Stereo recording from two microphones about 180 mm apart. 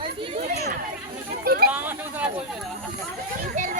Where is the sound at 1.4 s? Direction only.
60° right (ahead or behind).